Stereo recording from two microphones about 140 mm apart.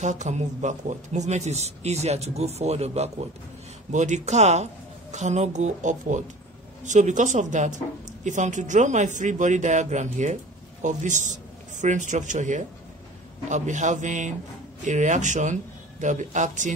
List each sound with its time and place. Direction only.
0.0 s a man's voice: 60° right (ahead or behind)